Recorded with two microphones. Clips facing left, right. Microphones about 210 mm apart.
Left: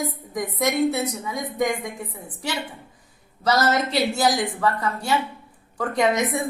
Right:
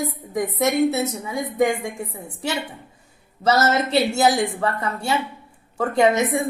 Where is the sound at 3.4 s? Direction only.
25° right (ahead or behind).